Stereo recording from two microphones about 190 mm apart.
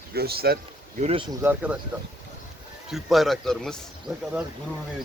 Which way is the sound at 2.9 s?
Centre (ahead or behind).